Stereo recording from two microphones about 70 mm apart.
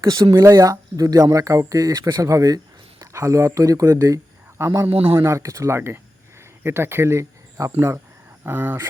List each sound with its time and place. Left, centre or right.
0.2 s speech: right
3.0 s speech: right
4.5 s speech: right
7.6 s speech: right
8.4 s speech: right